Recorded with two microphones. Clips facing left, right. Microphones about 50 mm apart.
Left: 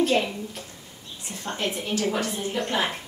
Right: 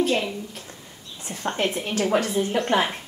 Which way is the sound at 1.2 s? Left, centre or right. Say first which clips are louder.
Right 7 dB; right.